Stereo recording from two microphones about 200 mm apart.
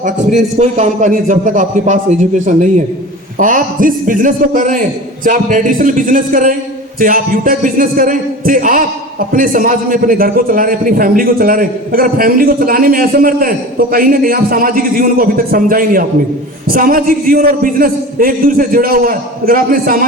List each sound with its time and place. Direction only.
0.0 s a man's voice: 35° right (ahead or behind)